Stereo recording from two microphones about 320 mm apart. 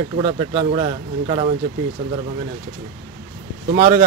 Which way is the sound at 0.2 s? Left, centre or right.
Centre.